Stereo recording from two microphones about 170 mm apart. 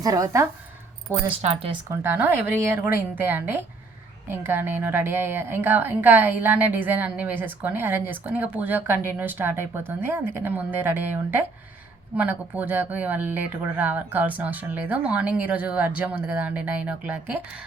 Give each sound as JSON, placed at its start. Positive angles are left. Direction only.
{"t": 0.0, "sound": "speech", "side_deg": -20}
{"t": 1.4, "sound": "speech", "side_deg": -40}
{"t": 1.7, "sound": "a woman's voice", "side_deg": -15}